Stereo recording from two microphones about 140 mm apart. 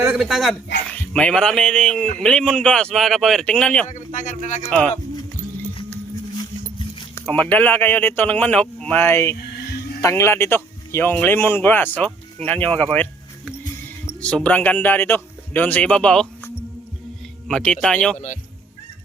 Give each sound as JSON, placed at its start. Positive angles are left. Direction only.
{"t": 0.0, "sound": "speech", "side_deg": -10}
{"t": 3.8, "sound": "speech", "side_deg": 60}
{"t": 4.7, "sound": "speech", "side_deg": 10}
{"t": 7.2, "sound": "speech", "side_deg": 10}
{"t": 17.5, "sound": "speech", "side_deg": 5}